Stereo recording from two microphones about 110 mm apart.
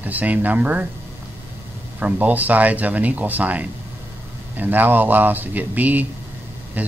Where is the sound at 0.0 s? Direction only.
15° right (ahead or behind).